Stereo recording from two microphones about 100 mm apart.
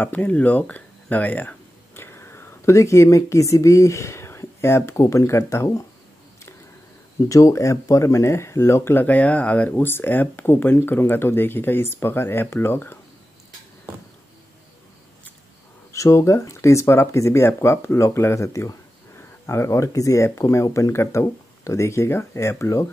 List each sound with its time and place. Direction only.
0.0 s speech: 15° left (ahead or behind)
7.2 s speech: 30° left (ahead or behind)
15.9 s speech: 30° left (ahead or behind)